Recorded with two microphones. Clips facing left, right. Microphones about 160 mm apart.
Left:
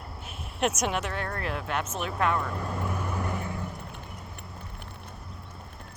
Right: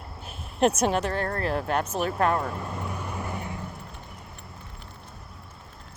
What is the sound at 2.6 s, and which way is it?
Vehicle, 5° right (ahead or behind).